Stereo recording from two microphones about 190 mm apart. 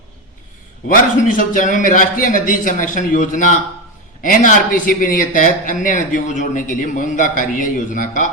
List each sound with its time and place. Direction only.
1.3 s speech: 45° left (ahead or behind)